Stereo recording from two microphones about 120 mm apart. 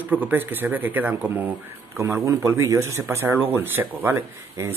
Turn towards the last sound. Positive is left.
turn(degrees=-20)  # may be behind; listen again after turning